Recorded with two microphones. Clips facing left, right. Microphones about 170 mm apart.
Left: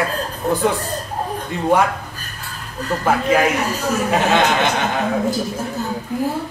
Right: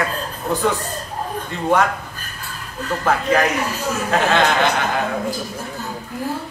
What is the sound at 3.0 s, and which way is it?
A man's voice, 10° left (ahead or behind).